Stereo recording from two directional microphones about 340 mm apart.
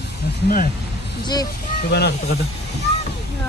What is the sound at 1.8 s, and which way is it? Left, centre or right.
Speech, left.